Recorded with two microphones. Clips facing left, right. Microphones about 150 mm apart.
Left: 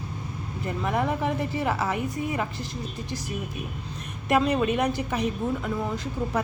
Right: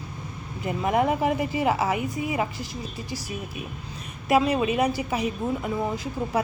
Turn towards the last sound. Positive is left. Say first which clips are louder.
# right 1 dB
turn(degrees=-10)  # may be behind; listen again after turning